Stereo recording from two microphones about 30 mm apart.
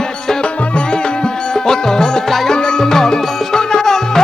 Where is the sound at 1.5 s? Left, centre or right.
Centre.